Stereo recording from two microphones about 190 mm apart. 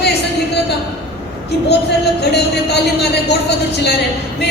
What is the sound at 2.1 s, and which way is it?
Speech, 60° left (ahead or behind).